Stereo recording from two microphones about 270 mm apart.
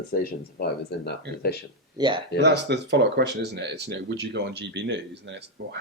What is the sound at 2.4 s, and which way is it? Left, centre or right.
Speech, right.